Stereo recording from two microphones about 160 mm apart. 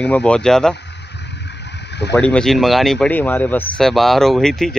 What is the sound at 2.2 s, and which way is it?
Speech, 5° left (ahead or behind).